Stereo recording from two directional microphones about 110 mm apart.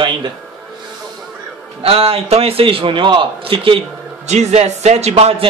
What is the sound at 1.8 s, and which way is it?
A man's voice, 60° right (ahead or behind).